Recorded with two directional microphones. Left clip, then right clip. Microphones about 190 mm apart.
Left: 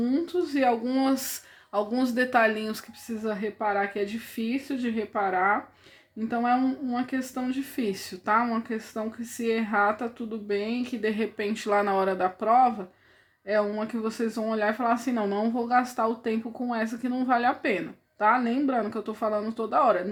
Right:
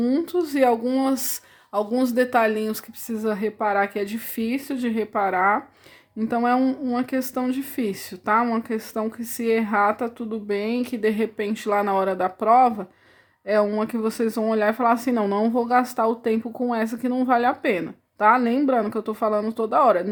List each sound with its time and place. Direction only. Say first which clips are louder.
0.0 s speech: right 4 dB; 35° right (ahead or behind)